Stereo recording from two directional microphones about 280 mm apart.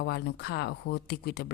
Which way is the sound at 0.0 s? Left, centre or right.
Left.